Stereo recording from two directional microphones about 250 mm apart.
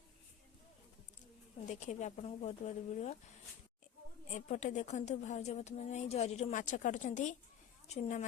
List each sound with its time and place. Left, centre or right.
1.7 s speech: left
4.4 s speech: left